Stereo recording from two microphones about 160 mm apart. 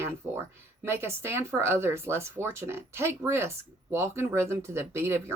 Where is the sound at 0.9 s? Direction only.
15° right (ahead or behind).